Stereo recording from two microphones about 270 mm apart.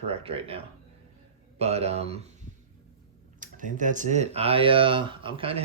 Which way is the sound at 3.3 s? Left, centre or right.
Right.